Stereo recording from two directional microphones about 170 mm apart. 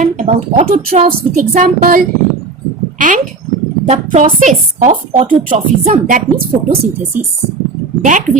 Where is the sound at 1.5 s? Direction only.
55° right (ahead or behind).